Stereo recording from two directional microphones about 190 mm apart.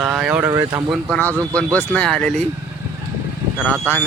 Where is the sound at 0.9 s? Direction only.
5° left (ahead or behind).